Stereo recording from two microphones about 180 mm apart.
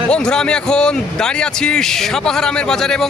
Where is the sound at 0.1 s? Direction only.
5° left (ahead or behind).